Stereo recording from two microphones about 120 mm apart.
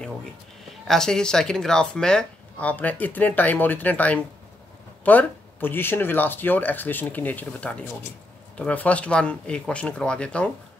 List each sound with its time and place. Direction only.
0.7 s speech: 5° left (ahead or behind)